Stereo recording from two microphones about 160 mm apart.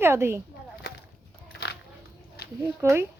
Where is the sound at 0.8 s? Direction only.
90° left.